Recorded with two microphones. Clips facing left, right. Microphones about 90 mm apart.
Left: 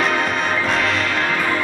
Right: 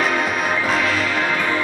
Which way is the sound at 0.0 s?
Centre (ahead or behind).